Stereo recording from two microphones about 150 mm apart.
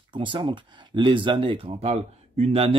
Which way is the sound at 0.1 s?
35° right (ahead or behind).